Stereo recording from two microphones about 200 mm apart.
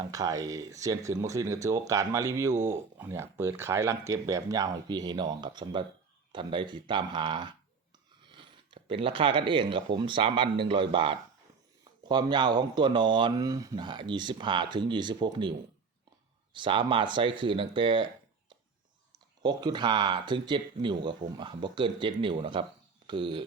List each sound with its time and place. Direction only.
0.0 s speech: 20° right (ahead or behind)